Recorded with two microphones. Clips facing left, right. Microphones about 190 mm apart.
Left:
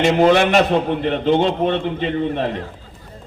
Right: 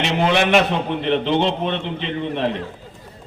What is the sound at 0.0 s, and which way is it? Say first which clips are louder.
A man's voice: left 5 dB; 50° left (ahead or behind).